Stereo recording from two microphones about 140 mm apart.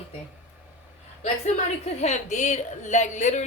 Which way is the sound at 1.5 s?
55° left (ahead or behind).